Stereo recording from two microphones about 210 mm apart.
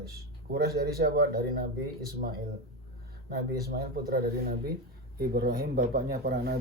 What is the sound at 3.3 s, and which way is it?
Speech, 50° right (ahead or behind).